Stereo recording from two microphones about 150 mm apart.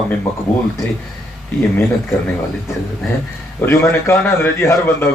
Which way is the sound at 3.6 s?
15° left (ahead or behind).